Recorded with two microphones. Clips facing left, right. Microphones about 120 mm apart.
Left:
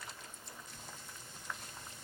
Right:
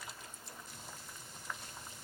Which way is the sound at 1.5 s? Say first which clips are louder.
Even; centre (ahead or behind).